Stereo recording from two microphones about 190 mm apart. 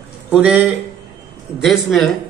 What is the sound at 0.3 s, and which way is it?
A man's voice, 5° right (ahead or behind).